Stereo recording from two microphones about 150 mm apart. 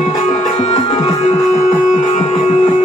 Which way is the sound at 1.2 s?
50° left (ahead or behind).